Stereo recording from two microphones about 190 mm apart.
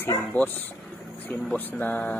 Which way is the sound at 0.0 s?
10° left (ahead or behind).